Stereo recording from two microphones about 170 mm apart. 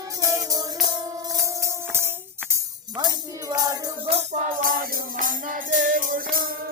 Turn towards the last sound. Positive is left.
turn(degrees=-55)  # may be behind; listen again after turning